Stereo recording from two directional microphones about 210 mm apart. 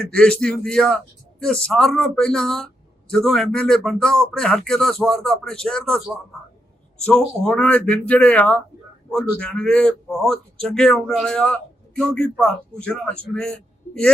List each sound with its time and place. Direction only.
0.1 s speech: 5° left (ahead or behind)
7.0 s speech: 5° left (ahead or behind)